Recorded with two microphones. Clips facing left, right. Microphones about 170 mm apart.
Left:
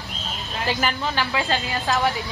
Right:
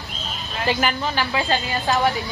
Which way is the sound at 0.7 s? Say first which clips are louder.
Right 2 dB; 5° right (ahead or behind).